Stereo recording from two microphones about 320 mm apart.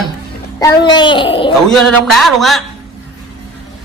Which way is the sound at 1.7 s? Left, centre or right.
Centre.